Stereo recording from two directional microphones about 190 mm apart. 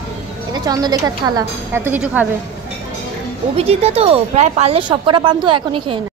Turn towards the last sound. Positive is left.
turn(degrees=-25)  # may be behind; listen again after turning